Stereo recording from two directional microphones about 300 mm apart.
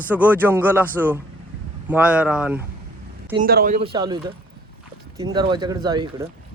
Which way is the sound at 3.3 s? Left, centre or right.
Right.